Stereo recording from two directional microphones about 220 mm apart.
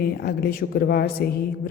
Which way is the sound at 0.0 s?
45° left (ahead or behind).